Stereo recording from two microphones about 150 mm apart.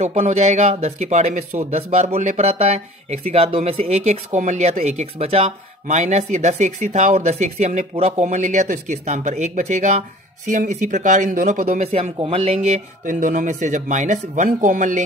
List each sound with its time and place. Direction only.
0.0 s speech: 45° right (ahead or behind); by 11.6 s 65° right (ahead or behind)
11.6 s speech: 45° right (ahead or behind)